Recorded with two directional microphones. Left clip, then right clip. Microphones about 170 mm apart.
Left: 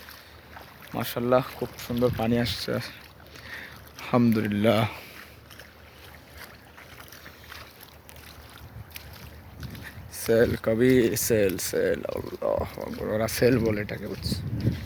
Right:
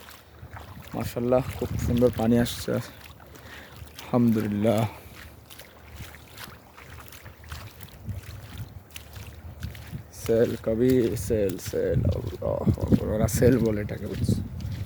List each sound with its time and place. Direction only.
0.9 s speech: 10° right (ahead or behind)
1.5 s speech: 15° left (ahead or behind)
2.0 s speech: 5° right (ahead or behind)
2.2 s speech: 35° right (ahead or behind)
4.0 s speech: 10° right (ahead or behind)
10.2 s speech: 5° right (ahead or behind)
13.1 s speech: 20° right (ahead or behind)